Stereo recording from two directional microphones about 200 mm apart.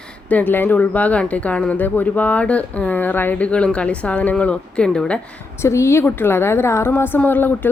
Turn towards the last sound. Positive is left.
turn(degrees=10)  # may be behind; listen again after turning